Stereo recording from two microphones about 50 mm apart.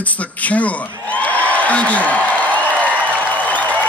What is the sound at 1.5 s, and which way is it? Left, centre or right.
Speech, left.